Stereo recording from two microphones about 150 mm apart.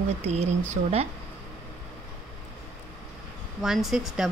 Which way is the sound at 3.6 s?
Centre (ahead or behind).